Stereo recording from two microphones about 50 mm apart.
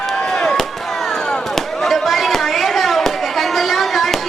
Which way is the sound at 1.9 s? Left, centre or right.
Centre.